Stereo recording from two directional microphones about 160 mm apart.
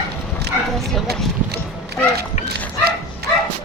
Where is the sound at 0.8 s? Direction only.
Centre (ahead or behind).